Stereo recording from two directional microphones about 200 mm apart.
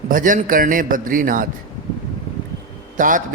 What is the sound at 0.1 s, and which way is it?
A man's voice, 40° right (ahead or behind).